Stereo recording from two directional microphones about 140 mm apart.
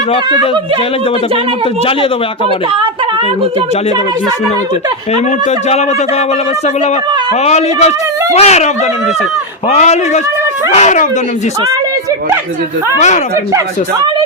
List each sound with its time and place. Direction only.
5.1 s speech: 50° left (ahead or behind)
7.4 s speech: 50° left (ahead or behind)